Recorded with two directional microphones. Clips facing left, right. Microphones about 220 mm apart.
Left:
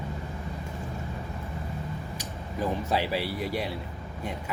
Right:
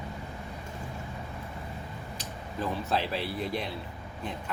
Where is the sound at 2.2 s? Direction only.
10° left (ahead or behind).